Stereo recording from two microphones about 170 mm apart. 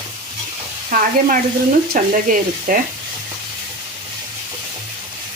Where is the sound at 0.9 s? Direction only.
55° right (ahead or behind).